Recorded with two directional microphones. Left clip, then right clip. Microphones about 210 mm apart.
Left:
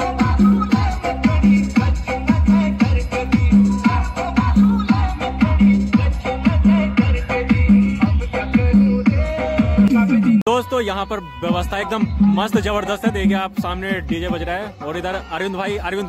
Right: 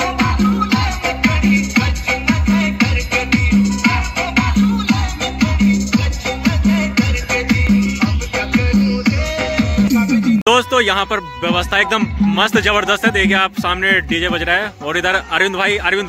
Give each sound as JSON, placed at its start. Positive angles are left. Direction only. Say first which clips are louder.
{"t": 0.0, "sound": "music", "louder": "right 2 dB", "side_deg": 45}
{"t": 10.4, "sound": "speech", "louder": "right 6 dB", "side_deg": 10}